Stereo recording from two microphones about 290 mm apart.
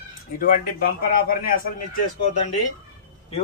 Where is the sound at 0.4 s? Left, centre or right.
Left.